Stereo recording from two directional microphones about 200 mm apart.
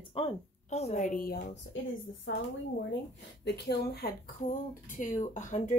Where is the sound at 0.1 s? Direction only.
30° left (ahead or behind); by 1.6 s 50° left (ahead or behind).